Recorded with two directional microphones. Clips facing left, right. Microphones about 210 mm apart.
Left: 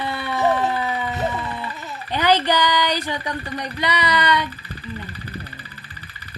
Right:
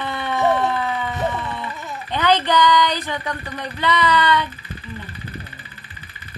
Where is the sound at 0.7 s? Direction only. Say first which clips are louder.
Right 1 dB; 15° left (ahead or behind).